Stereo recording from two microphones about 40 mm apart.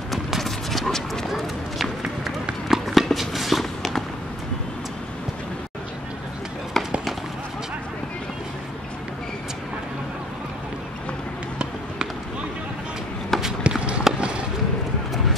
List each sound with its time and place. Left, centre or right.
0.1 s clip-clop: centre
1.3 s run: centre
6.8 s fireworks: centre
13.3 s walk: centre
13.7 s run: right